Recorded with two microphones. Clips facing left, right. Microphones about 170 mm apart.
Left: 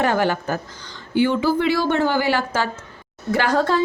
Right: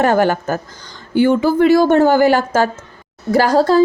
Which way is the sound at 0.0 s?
45° right (ahead or behind).